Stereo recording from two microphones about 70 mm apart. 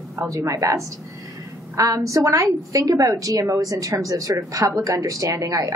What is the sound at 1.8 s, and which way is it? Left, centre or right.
A woman's voice, right.